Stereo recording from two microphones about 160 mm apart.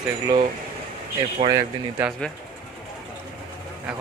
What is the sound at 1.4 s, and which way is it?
Speech, 35° right (ahead or behind).